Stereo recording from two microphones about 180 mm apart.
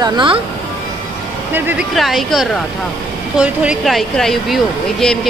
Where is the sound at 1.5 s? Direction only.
10° right (ahead or behind).